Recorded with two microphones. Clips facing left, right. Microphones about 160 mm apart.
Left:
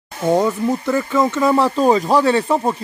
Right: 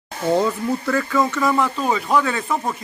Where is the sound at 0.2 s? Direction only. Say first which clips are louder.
Left 3 dB; 15° left (ahead or behind).